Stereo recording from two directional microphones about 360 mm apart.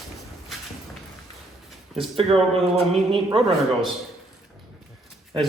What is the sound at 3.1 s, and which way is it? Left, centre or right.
Speech, centre.